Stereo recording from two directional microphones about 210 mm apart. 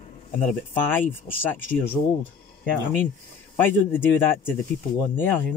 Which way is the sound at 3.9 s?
10° left (ahead or behind).